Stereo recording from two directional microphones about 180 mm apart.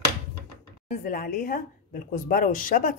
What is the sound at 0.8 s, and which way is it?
Speech, 50° left (ahead or behind).